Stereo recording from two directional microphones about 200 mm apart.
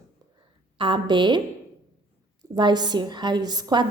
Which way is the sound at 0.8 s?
25° right (ahead or behind).